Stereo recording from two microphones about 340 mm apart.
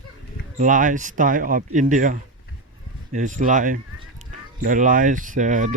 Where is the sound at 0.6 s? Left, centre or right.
Right.